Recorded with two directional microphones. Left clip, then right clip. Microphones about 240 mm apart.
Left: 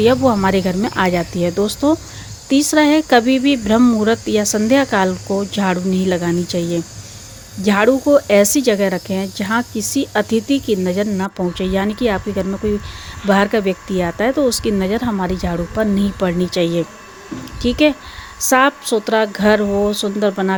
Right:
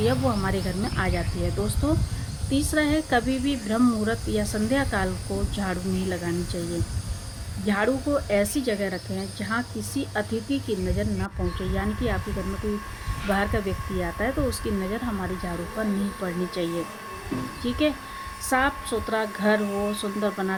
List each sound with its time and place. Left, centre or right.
0.0 s speech: left
7.6 s speech: left
13.2 s speech: left